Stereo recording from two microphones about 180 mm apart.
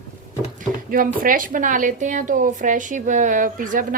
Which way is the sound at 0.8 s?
50° right (ahead or behind).